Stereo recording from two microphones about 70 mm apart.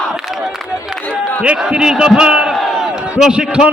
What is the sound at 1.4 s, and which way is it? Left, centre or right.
A man's voice, centre.